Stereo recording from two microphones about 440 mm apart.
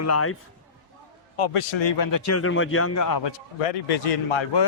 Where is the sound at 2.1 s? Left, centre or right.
Left.